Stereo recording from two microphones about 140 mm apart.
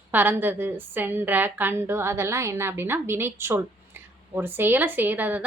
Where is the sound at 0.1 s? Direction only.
15° right (ahead or behind).